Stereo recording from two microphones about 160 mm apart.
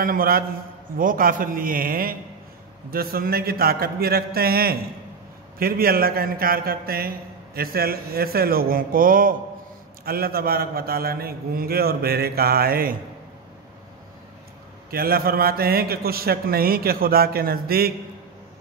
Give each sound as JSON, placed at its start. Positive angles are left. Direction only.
{"t": 0.0, "sound": "a man's voice", "side_deg": -65}
{"t": 14.9, "sound": "a man's voice", "side_deg": -70}